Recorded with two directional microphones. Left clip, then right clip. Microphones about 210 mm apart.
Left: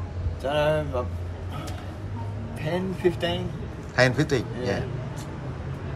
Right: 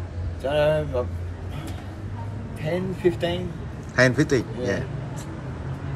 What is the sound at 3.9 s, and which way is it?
Speech, 5° left (ahead or behind).